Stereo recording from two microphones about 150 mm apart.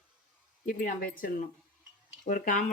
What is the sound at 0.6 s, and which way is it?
Speech, 70° left (ahead or behind).